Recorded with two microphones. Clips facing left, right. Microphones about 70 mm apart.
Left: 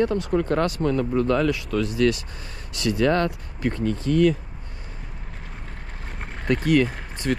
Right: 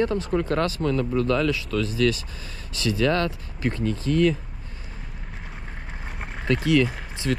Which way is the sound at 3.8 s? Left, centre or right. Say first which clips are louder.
Left 2 dB; left.